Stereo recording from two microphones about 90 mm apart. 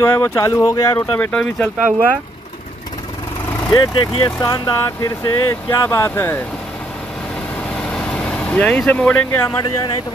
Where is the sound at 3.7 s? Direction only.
50° left (ahead or behind).